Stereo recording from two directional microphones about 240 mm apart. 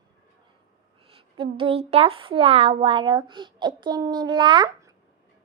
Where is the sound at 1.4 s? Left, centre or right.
Right.